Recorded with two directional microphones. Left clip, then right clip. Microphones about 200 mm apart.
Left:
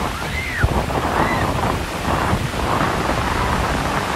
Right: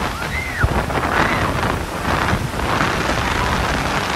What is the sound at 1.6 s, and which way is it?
Wind noise, 25° left (ahead or behind).